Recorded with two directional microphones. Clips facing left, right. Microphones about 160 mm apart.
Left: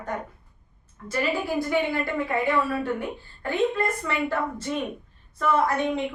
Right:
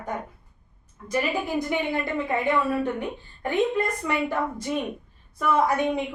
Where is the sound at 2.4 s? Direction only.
20° right (ahead or behind).